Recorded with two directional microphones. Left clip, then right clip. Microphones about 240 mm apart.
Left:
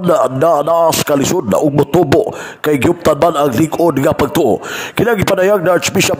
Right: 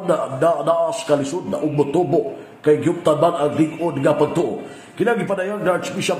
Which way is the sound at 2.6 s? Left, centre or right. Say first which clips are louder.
Left 4 dB; left.